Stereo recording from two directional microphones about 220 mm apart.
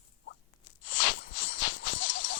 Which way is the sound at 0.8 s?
55° left (ahead or behind).